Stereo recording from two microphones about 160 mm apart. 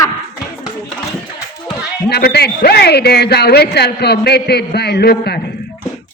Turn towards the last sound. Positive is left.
turn(degrees=85)